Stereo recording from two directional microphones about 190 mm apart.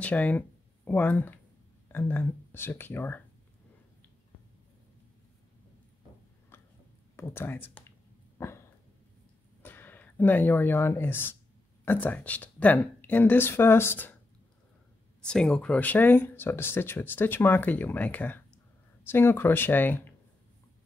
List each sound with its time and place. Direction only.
0.0 s speech: 10° left (ahead or behind)
6.5 s a sound: 10° left (ahead or behind)
7.2 s speech: 10° left (ahead or behind)
8.4 s dog: 15° left (ahead or behind)
9.6 s speech: 10° left (ahead or behind)
15.2 s speech: 5° left (ahead or behind)